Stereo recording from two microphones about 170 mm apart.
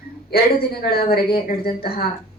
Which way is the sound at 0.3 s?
65° left (ahead or behind).